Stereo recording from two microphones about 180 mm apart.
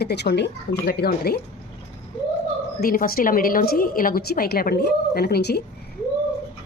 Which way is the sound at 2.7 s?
55° left (ahead or behind).